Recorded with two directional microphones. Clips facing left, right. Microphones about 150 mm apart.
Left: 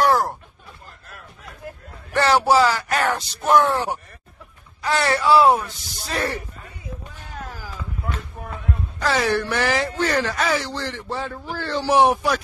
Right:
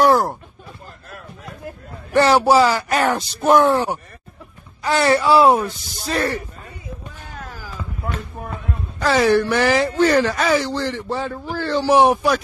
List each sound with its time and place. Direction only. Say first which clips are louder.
0.0 s a sound: right 4 dB; 15° right (ahead or behind)
2.1 s speech: right 3 dB; 15° right (ahead or behind)
6.0 s speech: right 4 dB; 5° left (ahead or behind)
9.1 s speech: right 6 dB; 5° right (ahead or behind)